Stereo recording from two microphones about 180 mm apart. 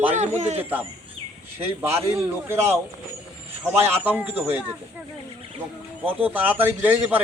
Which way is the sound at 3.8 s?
10° right (ahead or behind).